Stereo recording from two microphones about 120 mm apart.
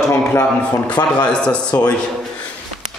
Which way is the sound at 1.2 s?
10° left (ahead or behind).